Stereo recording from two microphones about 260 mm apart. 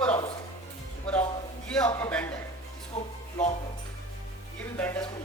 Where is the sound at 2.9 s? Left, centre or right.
Left.